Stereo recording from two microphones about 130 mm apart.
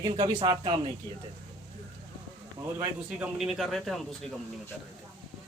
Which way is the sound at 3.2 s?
5° right (ahead or behind).